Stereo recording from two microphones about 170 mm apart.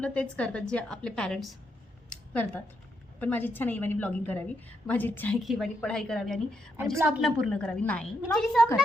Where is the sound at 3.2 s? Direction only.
10° left (ahead or behind).